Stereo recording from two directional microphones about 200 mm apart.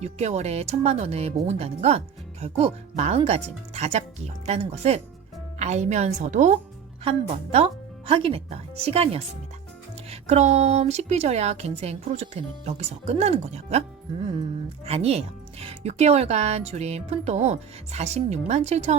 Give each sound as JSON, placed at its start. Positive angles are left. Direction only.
{"t": 0.0, "sound": "speech", "side_deg": -35}
{"t": 14.8, "sound": "speech", "side_deg": -30}